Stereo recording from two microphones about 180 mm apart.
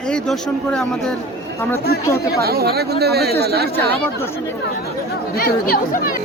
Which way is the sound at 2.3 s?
60° right (ahead or behind).